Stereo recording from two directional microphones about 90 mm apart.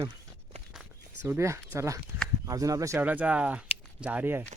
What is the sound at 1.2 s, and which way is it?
Speech, 30° right (ahead or behind).